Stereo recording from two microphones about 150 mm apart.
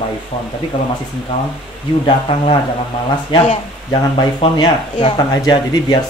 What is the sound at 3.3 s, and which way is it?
Speech, 30° left (ahead or behind).